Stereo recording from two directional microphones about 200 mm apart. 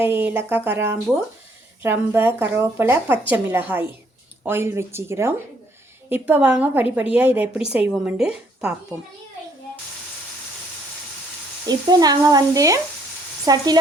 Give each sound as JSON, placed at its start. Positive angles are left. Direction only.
{"t": 0.0, "sound": "a woman's voice", "side_deg": -10}
{"t": 11.6, "sound": "speech", "side_deg": -20}